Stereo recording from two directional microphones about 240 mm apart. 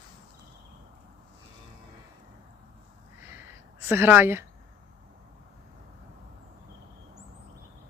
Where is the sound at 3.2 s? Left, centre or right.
Centre.